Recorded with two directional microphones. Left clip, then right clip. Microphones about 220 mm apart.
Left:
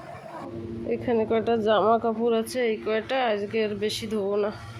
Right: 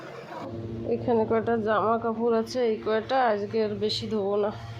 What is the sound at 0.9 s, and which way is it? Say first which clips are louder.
Speech: even; 5° left (ahead or behind).